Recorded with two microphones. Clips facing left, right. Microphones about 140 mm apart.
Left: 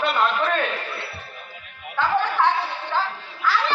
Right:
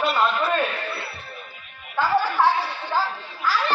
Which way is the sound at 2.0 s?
10° right (ahead or behind).